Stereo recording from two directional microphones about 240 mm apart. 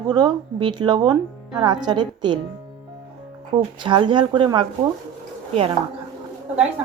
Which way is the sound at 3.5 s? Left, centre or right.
Centre.